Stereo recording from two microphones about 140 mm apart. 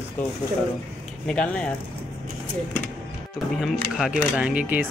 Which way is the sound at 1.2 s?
5° left (ahead or behind).